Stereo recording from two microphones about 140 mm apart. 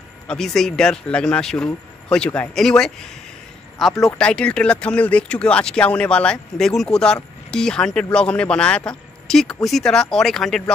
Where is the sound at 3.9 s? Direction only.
25° left (ahead or behind).